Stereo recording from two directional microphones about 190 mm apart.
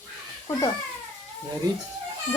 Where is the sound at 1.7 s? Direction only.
20° right (ahead or behind).